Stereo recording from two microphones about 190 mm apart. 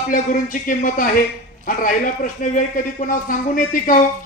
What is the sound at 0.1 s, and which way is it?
A man's voice, 45° left (ahead or behind).